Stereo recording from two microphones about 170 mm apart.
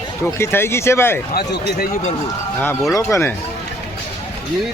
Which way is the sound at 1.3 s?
75° left (ahead or behind).